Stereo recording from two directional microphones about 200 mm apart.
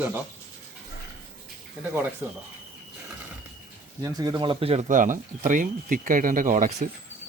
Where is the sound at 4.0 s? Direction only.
20° right (ahead or behind); by 6.9 s 40° right (ahead or behind).